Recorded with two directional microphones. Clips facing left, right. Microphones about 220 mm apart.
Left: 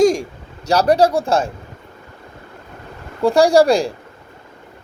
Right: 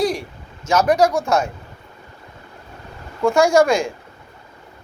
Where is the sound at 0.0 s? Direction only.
45° left (ahead or behind).